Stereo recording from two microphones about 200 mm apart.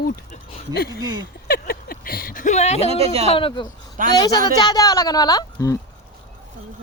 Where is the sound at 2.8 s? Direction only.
30° right (ahead or behind).